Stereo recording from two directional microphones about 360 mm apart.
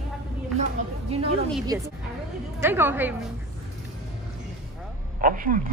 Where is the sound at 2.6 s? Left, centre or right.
Centre.